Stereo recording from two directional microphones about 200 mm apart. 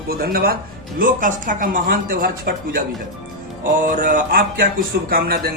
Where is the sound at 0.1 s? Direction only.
50° right (ahead or behind).